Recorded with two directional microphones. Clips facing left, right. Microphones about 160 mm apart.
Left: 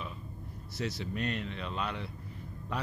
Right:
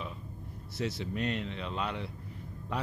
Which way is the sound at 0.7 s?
25° right (ahead or behind).